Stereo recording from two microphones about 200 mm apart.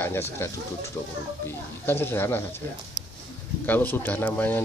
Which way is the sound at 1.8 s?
10° left (ahead or behind).